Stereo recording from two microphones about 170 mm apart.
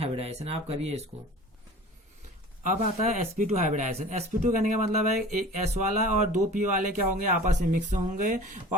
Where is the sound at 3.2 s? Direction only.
45° right (ahead or behind).